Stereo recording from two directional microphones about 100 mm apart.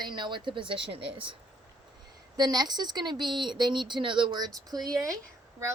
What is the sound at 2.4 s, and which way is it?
Speech, 45° right (ahead or behind).